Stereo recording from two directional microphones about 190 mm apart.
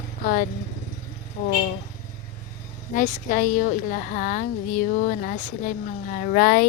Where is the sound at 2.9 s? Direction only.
45° left (ahead or behind).